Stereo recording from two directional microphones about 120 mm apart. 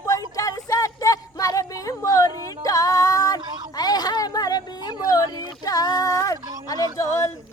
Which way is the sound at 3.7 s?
35° left (ahead or behind).